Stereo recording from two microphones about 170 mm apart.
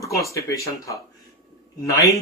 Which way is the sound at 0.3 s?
20° left (ahead or behind).